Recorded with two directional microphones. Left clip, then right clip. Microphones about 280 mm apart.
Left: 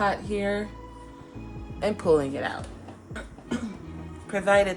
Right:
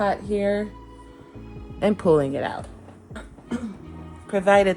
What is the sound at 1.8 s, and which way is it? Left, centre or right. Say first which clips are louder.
Speech: right 3 dB; right.